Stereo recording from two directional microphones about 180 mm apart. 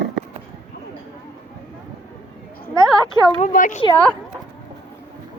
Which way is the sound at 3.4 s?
45° left (ahead or behind).